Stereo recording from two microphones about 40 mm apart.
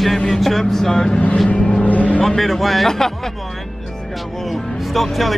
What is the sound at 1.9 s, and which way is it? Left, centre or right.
Vehicle, left.